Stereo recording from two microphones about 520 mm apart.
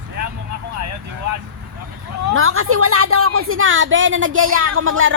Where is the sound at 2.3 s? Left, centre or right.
Right.